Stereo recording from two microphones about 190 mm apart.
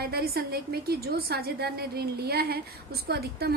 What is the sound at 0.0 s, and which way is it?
A woman's voice, 55° right (ahead or behind).